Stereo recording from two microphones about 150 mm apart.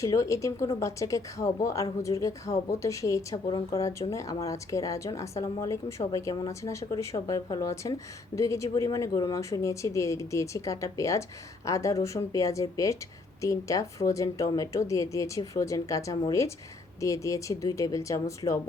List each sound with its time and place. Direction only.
0.0 s a woman's voice: 20° left (ahead or behind)